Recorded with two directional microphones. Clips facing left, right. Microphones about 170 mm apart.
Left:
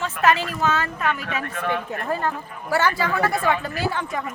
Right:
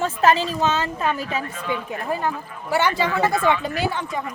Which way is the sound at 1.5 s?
60° left (ahead or behind).